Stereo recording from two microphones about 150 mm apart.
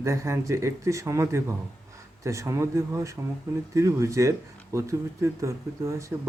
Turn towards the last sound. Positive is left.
turn(degrees=-20)  # may be behind; listen again after turning